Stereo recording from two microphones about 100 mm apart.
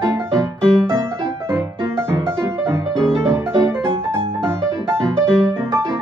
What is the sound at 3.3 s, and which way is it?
Music, 30° right (ahead or behind).